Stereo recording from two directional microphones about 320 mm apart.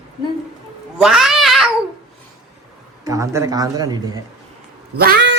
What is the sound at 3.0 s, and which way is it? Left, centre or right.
A man's voice, centre.